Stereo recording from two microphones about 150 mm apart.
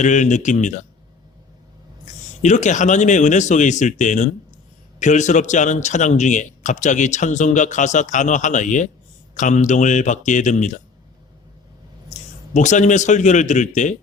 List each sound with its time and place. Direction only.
0.0 s speech: 55° left (ahead or behind)
2.4 s speech: 55° left (ahead or behind)
12.1 s a man's voice: 55° left (ahead or behind)